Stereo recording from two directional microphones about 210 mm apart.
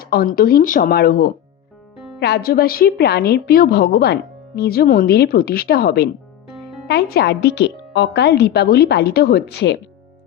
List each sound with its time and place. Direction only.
0.0 s a woman's voice: 45° left (ahead or behind)